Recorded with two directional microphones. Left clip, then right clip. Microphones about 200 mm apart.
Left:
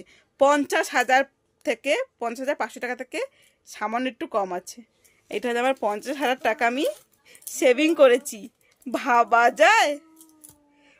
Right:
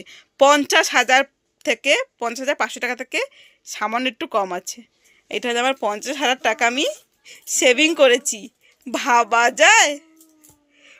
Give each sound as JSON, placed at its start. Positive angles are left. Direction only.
{"t": 0.0, "sound": "speech", "side_deg": -5}